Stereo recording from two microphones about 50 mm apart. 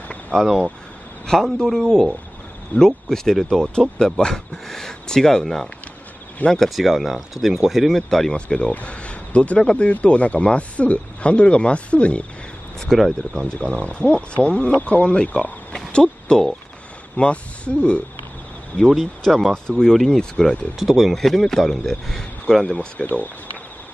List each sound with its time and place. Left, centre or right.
0.3 s speech: centre
3.7 s speech: centre
8.3 s speech: centre
8.7 s a sound: left
9.8 s speech: left
12.8 s speech: centre
13.5 s speech: left
15.7 s a sound: centre
17.2 s speech: left
19.2 s speech: centre
20.8 s speech: centre
21.1 s speech: centre
23.0 s speech: left